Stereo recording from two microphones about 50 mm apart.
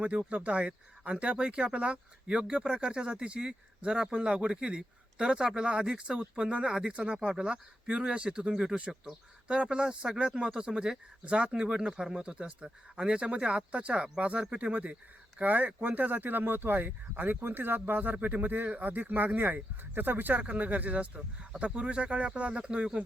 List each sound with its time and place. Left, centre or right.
0.0 s speech: right
0.6 s speech: centre